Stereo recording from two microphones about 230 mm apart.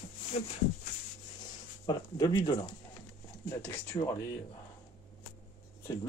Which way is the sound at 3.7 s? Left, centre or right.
Centre.